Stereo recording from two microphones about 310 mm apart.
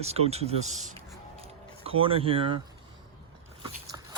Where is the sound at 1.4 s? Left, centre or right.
Centre.